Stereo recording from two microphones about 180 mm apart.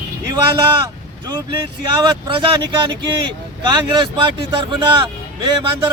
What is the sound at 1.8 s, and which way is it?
Speech, 25° right (ahead or behind).